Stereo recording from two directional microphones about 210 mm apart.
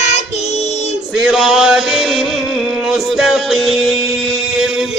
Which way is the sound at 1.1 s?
Centre (ahead or behind).